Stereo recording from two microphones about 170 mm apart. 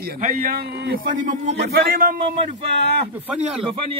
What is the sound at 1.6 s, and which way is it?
Speech, 65° right (ahead or behind).